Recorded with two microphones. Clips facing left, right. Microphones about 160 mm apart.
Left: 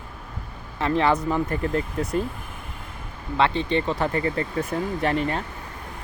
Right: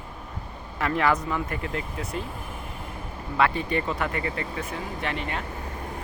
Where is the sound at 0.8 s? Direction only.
25° left (ahead or behind).